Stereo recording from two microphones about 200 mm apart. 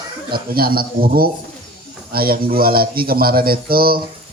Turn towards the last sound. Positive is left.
turn(degrees=-50)  # may be behind; listen again after turning